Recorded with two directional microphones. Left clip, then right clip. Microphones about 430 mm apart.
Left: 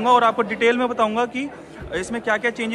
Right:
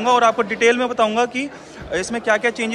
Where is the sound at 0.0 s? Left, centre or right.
Centre.